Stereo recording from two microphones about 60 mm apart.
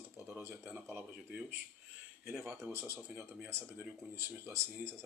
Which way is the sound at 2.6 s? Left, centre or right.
Right.